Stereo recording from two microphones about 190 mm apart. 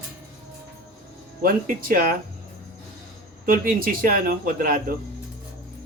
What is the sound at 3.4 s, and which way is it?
Speech, 50° right (ahead or behind).